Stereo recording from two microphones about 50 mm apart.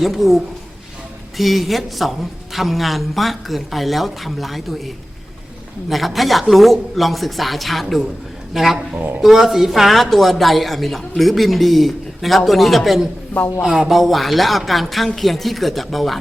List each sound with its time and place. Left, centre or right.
0.0 s speech: centre
5.9 s speech: centre
9.0 s speech: right
9.2 s speech: centre